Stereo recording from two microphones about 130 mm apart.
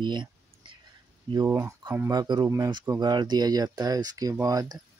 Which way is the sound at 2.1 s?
35° right (ahead or behind).